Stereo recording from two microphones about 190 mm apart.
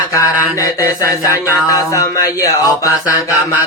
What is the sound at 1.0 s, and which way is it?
Music, 15° left (ahead or behind).